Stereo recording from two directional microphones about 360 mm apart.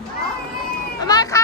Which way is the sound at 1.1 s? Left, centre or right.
Centre.